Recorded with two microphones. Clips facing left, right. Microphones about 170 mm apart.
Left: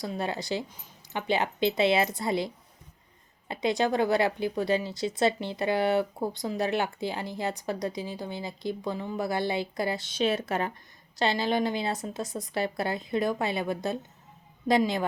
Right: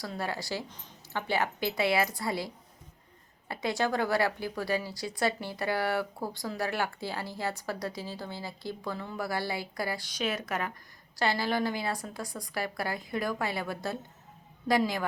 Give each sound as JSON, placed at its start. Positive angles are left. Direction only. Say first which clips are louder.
{"t": 0.0, "sound": "speech", "louder": "left 3 dB", "side_deg": 20}
{"t": 3.5, "sound": "speech", "louder": "left 4 dB", "side_deg": 20}